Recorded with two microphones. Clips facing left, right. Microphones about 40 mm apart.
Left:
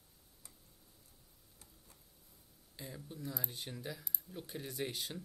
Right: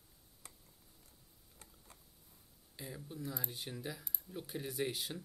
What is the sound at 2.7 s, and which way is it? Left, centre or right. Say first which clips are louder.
Speech: right 2 dB; centre.